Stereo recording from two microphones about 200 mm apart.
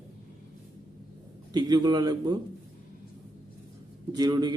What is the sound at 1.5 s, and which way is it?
Speech, 20° right (ahead or behind).